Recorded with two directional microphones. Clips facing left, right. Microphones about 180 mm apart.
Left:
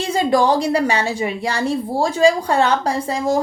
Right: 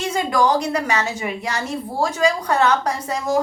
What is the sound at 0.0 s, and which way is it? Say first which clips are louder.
A woman's voice: left 3 dB; 30° left (ahead or behind).